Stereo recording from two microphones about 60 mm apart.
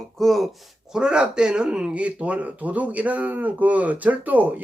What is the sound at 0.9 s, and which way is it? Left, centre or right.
Speech, centre.